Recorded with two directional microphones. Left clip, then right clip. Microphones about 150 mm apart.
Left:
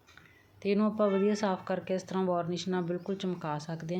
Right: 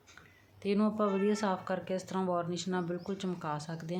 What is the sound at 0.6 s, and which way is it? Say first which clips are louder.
A woman's voice: left 3 dB; 15° left (ahead or behind).